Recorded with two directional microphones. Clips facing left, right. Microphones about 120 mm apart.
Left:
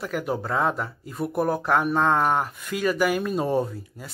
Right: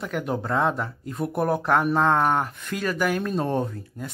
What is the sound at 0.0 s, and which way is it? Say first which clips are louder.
Speech: even; centre (ahead or behind).